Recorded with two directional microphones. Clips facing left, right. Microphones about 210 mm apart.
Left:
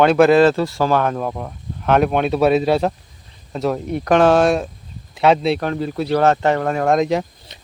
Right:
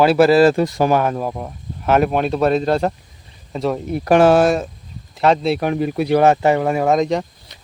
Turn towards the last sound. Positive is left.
turn(degrees=0)  # may be behind; listen again after turning